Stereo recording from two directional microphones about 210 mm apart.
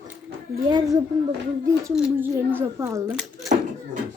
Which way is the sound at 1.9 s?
5° right (ahead or behind).